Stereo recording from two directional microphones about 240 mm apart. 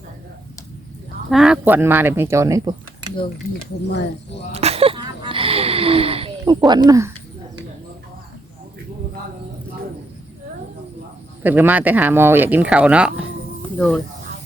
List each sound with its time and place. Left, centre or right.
1.3 s speech: centre
4.5 s a sound: right
6.7 s speech: centre
11.4 s speech: centre